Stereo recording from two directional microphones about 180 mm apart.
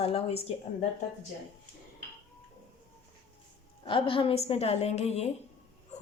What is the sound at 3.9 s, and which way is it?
Speech, 30° left (ahead or behind).